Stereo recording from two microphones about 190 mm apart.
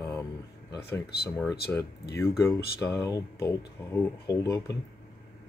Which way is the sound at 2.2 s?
15° left (ahead or behind).